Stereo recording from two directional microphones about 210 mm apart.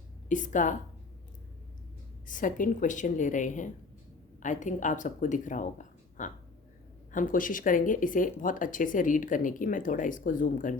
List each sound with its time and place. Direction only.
0.3 s speech: 35° left (ahead or behind)
2.2 s speech: 40° left (ahead or behind)